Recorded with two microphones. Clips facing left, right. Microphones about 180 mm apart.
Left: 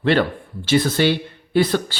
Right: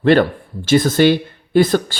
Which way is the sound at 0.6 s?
45° right (ahead or behind).